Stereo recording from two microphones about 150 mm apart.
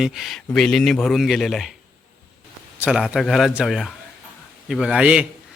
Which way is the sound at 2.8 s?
5° right (ahead or behind).